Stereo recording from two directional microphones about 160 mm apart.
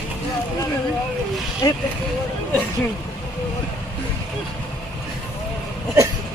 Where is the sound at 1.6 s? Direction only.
25° left (ahead or behind).